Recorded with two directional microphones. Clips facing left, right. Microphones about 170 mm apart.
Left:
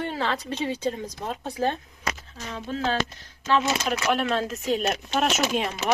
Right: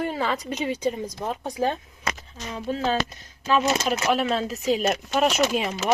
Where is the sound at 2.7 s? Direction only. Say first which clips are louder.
Even; 5° right (ahead or behind).